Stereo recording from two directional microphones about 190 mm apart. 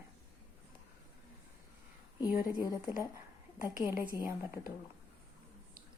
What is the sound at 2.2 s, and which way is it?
Speech, 10° right (ahead or behind).